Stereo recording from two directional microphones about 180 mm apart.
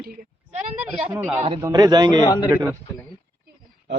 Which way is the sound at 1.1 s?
10° right (ahead or behind).